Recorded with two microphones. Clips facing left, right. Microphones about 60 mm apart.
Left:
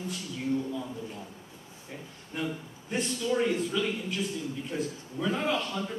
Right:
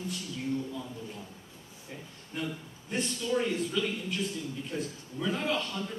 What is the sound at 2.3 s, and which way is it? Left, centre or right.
A man's voice, centre.